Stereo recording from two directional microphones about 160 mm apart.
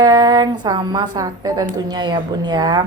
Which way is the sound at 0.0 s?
25° right (ahead or behind).